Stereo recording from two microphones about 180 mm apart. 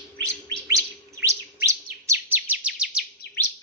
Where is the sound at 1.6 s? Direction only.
15° right (ahead or behind).